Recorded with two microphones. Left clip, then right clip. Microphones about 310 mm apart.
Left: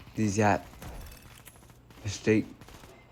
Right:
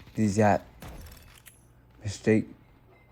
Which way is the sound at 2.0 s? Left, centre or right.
Right.